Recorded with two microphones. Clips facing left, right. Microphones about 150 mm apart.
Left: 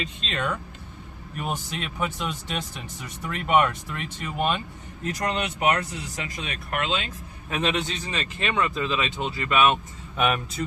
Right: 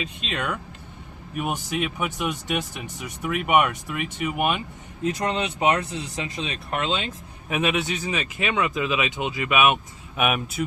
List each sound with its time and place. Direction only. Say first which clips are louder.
0.0 s speech: even; 5° right (ahead or behind); by 7.1 s 25° right (ahead or behind)
7.5 s speech: right 2 dB; 5° right (ahead or behind)